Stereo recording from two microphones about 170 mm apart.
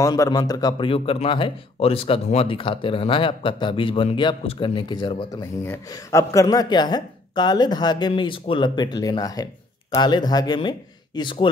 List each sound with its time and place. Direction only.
0.0 s speech: 20° left (ahead or behind)